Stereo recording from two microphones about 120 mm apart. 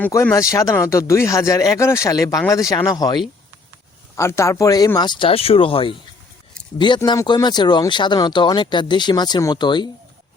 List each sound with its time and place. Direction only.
0.3 s speech: 30° left (ahead or behind)
4.1 s speech: 25° left (ahead or behind)
4.9 s speech: 40° left (ahead or behind)